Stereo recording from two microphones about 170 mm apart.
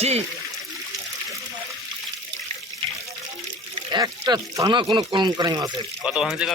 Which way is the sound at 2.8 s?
30° right (ahead or behind).